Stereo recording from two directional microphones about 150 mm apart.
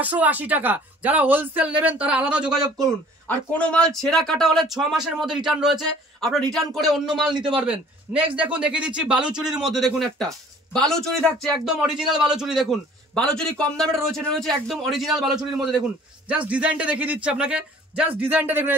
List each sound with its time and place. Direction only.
0.0 s speech: 10° right (ahead or behind)
2.8 s a man's voice: 10° left (ahead or behind)
7.3 s a man's voice: 35° right (ahead or behind)
7.6 s a man's voice: 10° right (ahead or behind)